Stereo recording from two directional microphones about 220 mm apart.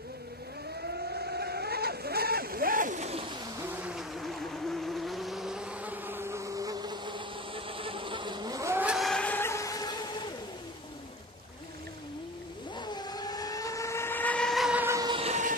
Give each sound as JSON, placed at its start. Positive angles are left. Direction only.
{"t": 0.8, "sound": "vehicle", "side_deg": -45}
{"t": 3.6, "sound": "vehicle", "side_deg": -5}
{"t": 12.7, "sound": "vehicle", "side_deg": 20}